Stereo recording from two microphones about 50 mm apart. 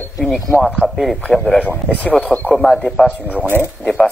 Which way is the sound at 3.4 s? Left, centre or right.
Right.